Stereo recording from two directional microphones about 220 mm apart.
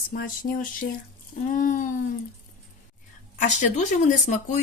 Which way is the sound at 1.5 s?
35° left (ahead or behind).